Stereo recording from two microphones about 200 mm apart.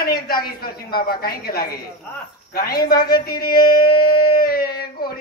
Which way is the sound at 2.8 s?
50° left (ahead or behind).